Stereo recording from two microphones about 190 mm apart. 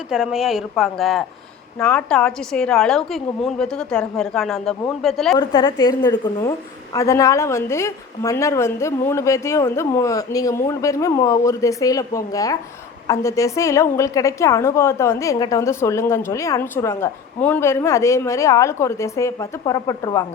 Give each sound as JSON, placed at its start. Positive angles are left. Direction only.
{"t": 0.1, "sound": "a woman's voice", "side_deg": -5}
{"t": 5.4, "sound": "a woman's voice", "side_deg": 25}